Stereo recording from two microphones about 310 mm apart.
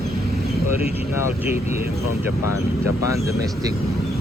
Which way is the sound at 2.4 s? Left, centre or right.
Left.